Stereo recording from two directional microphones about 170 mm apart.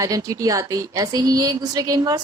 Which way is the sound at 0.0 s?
20° right (ahead or behind).